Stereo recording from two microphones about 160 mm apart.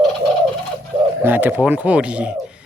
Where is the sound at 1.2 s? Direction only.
10° right (ahead or behind).